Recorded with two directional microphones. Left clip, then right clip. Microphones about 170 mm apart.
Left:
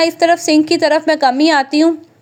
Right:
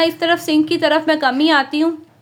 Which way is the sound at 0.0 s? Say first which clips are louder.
Left 4 dB; 35° left (ahead or behind).